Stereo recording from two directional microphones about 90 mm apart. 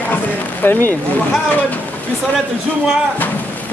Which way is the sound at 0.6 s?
25° left (ahead or behind).